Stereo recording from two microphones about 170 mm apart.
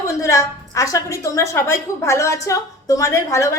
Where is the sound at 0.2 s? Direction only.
20° left (ahead or behind).